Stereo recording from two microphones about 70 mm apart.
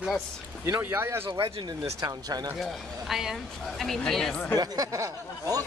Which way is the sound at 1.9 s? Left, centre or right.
Right.